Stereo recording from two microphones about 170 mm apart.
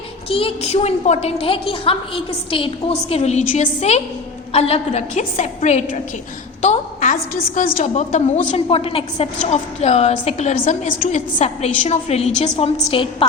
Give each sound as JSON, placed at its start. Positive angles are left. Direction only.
{"t": 0.3, "sound": "a woman's voice", "side_deg": 35}